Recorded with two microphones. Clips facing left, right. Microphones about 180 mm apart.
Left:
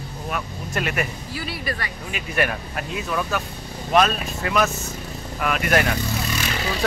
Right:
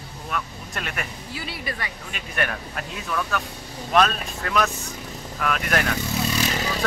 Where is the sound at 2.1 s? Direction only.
5° left (ahead or behind).